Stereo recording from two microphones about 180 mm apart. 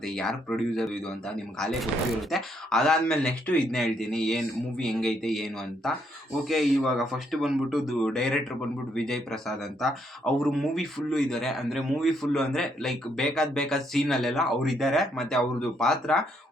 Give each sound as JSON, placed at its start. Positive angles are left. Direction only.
{"t": 0.0, "sound": "speech", "side_deg": 5}